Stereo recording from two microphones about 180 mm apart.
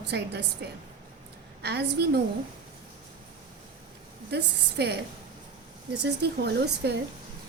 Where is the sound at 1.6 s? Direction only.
65° right (ahead or behind).